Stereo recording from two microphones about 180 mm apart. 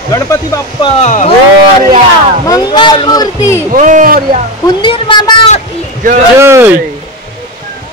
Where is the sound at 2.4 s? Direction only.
20° left (ahead or behind).